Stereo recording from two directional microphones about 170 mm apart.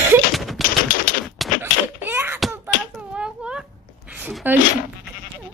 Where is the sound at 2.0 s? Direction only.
10° right (ahead or behind).